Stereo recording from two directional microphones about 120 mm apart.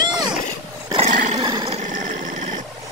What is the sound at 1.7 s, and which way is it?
Dog, 90° right.